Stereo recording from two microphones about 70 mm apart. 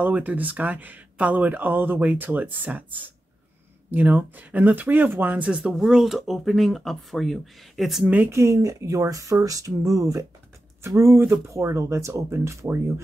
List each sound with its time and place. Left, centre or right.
0.0 s speech: right
5.5 s speech: centre
8.3 s speech: right
11.0 s speech: right